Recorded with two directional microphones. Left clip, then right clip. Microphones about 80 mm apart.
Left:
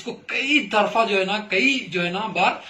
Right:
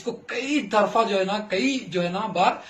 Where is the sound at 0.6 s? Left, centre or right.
Right.